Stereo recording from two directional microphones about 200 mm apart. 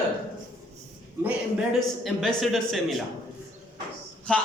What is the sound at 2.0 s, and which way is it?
Speech, centre (ahead or behind).